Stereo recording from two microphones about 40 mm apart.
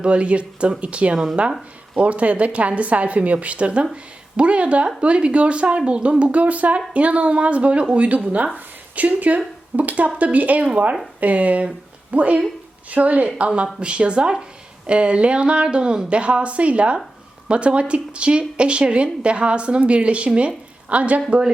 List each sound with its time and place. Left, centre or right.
0.0 s a woman's voice: right